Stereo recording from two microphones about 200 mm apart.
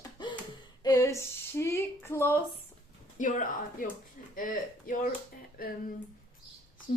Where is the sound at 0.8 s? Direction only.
15° left (ahead or behind).